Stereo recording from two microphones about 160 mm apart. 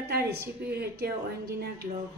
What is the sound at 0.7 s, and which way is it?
Speech, 90° right.